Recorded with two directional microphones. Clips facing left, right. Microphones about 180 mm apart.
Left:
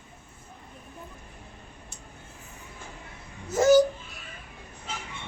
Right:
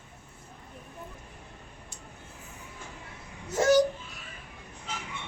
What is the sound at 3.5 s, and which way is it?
Speech, 5° left (ahead or behind).